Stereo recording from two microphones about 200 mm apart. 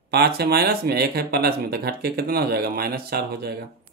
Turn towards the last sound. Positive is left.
turn(degrees=-50)  # may be behind; listen again after turning